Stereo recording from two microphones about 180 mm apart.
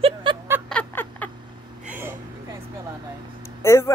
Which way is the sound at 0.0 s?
30° right (ahead or behind).